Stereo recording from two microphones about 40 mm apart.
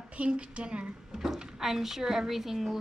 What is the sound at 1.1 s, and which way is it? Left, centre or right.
A woman's voice, centre.